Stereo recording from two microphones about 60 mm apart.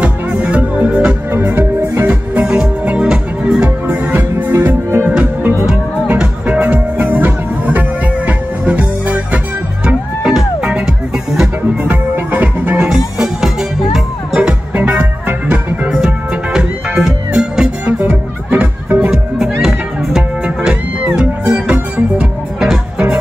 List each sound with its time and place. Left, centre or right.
0.0 s music: right
1.3 s music: right
2.4 s music: centre
3.8 s music: right
5.0 s music: right
10.2 s music: centre
11.8 s music: right
12.9 s music: centre
14.7 s music: right
16.5 s music: centre
18.0 s music: right
19.0 s music: centre
21.2 s music: centre